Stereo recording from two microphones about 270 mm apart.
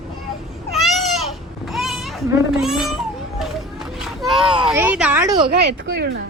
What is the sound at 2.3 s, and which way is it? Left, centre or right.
Speech, centre.